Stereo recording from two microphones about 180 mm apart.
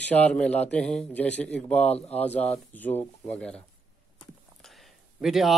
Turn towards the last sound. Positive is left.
turn(degrees=0)  # may be behind; listen again after turning